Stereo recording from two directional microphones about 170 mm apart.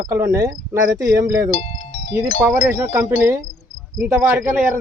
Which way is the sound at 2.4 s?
15° right (ahead or behind).